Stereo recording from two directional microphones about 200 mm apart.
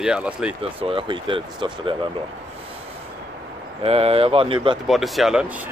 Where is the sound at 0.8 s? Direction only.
25° right (ahead or behind).